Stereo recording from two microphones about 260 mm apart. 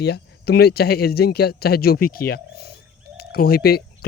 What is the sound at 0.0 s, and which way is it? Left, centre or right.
Speech, left.